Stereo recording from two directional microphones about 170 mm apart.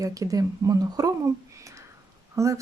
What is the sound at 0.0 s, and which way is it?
Speech, 20° right (ahead or behind).